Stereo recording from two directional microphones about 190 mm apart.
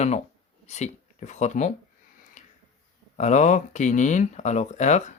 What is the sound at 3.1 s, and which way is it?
Speech, 40° left (ahead or behind).